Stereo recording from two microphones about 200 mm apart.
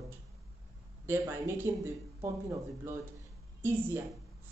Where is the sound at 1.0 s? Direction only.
10° right (ahead or behind).